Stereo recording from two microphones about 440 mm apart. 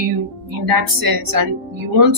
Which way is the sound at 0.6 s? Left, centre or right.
Right.